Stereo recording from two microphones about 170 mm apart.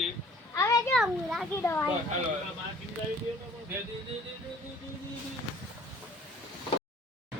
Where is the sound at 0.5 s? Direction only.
20° left (ahead or behind).